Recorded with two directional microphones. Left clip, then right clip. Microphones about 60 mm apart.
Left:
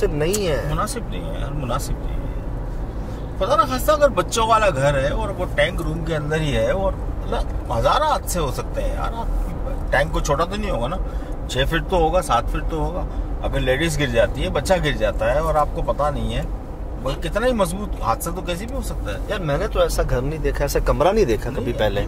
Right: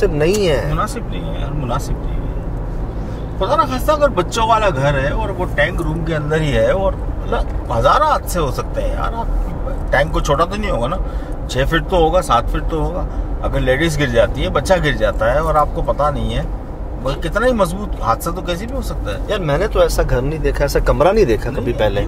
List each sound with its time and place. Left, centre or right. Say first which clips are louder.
0.2 s speech: right 6 dB; right
0.7 s speech: right 4 dB; left
3.4 s speech: right 2 dB; left
6.3 s speech: right 6 dB; right
19.2 s speech: right 6 dB; right
20.0 s speech: right 5 dB; centre